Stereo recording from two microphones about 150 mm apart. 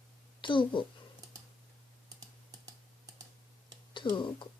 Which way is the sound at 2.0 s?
25° right (ahead or behind).